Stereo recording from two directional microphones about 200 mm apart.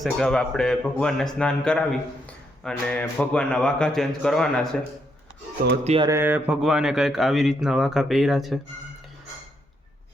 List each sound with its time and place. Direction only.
0.0 s speech: centre (ahead or behind)
5.8 s a sound: 30° right (ahead or behind)
6.1 s speech: 10° right (ahead or behind)